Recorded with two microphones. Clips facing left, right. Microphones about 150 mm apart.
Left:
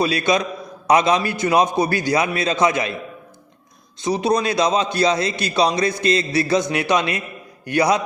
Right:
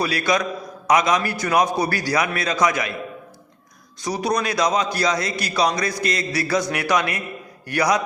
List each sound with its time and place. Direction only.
0.0 s a man's voice: 20° left (ahead or behind)
4.0 s a man's voice: 25° left (ahead or behind)